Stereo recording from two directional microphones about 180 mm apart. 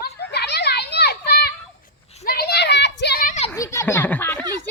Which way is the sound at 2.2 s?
60° left (ahead or behind).